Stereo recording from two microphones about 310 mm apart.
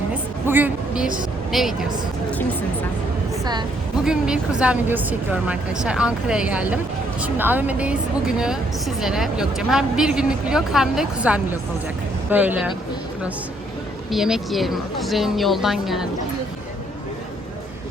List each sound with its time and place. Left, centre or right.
0.4 s a woman's voice: centre
3.4 s a woman's voice: centre
4.0 s a woman's voice: centre
9.0 s a woman's voice: centre
14.1 s a woman's voice: centre